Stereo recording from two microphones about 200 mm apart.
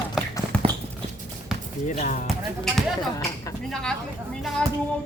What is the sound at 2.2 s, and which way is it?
Speech, centre (ahead or behind).